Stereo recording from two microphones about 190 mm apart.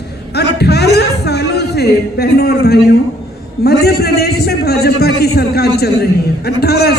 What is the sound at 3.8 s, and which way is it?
A man's voice, 55° left (ahead or behind).